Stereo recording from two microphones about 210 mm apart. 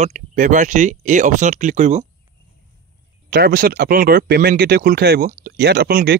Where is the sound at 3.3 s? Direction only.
45° right (ahead or behind).